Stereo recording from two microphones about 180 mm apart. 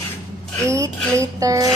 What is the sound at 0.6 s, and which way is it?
Speech, 15° right (ahead or behind).